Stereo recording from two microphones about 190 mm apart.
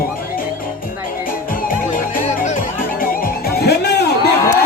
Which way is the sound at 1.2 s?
50° left (ahead or behind).